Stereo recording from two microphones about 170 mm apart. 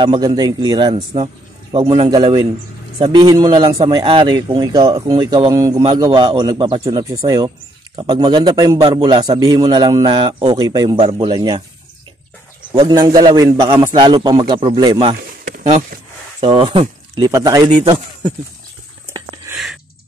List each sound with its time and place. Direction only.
0.0 s a man's voice: 30° right (ahead or behind)
12.7 s a man's voice: 25° right (ahead or behind)
16.3 s speech: 35° right (ahead or behind)
17.2 s a man's voice: 20° right (ahead or behind)
19.5 s a sound: centre (ahead or behind)